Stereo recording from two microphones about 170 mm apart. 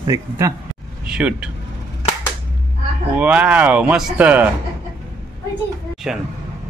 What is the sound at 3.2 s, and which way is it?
Speech, 5° right (ahead or behind).